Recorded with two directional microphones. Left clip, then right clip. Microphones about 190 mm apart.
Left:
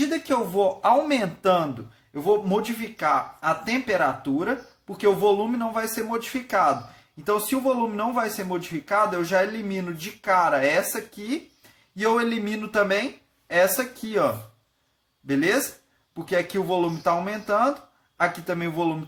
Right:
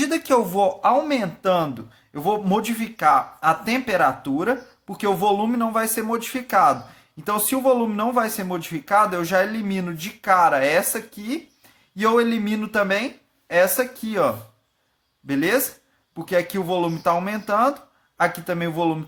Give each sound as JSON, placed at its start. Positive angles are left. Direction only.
{"t": 0.1, "sound": "speech", "side_deg": -30}
{"t": 2.2, "sound": "speech", "side_deg": -25}